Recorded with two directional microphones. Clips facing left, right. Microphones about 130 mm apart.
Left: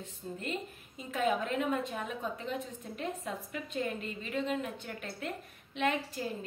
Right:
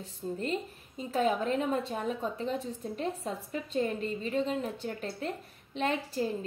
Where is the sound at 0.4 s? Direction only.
35° right (ahead or behind).